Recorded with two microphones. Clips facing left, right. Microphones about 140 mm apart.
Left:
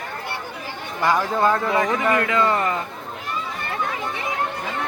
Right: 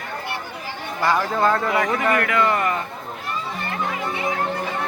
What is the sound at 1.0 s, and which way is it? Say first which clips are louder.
Speech: even; 15° left (ahead or behind).